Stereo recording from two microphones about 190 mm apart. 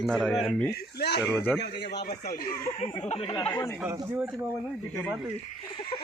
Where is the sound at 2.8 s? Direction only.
30° left (ahead or behind).